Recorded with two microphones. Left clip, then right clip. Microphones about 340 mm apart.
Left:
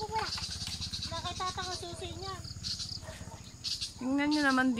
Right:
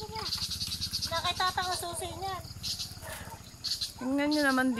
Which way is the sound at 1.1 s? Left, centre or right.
Right.